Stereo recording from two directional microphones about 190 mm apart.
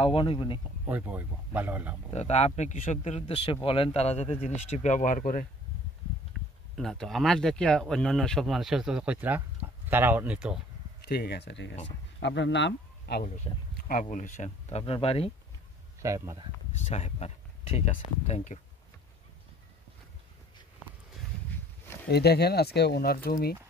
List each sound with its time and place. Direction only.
0.0 s speech: 25° left (ahead or behind)
0.8 s speech: 10° right (ahead or behind)
2.1 s speech: 35° left (ahead or behind)
6.7 s speech: centre (ahead or behind)
11.1 s speech: 55° left (ahead or behind)
13.5 s speech: 25° left (ahead or behind)
14.1 s speech: 40° left (ahead or behind)
16.0 s speech: 15° right (ahead or behind)
16.7 s speech: 35° left (ahead or behind)
22.0 s speech: 60° left (ahead or behind)